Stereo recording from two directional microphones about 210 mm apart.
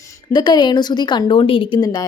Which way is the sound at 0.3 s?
20° left (ahead or behind).